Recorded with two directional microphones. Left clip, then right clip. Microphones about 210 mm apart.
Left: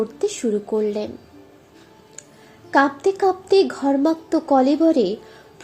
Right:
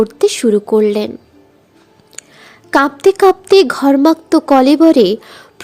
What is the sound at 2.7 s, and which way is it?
A woman's voice, 45° right (ahead or behind).